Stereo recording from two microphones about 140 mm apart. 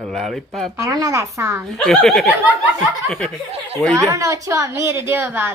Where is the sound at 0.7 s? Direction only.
25° right (ahead or behind).